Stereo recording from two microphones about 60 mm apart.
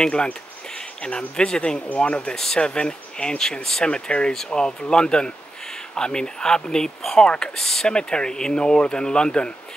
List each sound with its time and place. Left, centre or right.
0.0 s speech: centre